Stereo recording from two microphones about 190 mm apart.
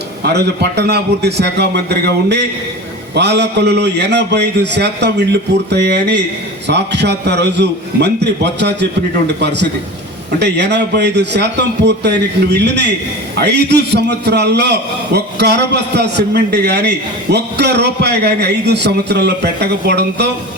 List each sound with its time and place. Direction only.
0.2 s a man's voice: 60° right (ahead or behind)